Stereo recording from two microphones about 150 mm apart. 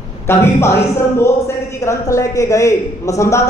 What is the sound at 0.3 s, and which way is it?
Speech, 15° left (ahead or behind).